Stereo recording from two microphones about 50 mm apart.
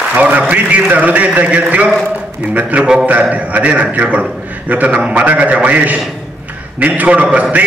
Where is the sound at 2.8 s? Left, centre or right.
Centre.